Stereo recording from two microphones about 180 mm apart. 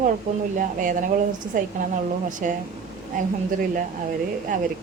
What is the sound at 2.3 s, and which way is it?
Speech, 45° right (ahead or behind).